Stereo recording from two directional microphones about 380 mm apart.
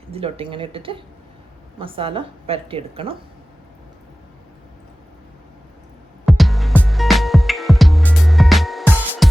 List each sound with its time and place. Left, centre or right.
0.1 s a woman's voice: centre
6.2 s music: centre